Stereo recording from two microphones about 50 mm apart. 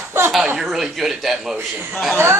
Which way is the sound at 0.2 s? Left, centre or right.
Right.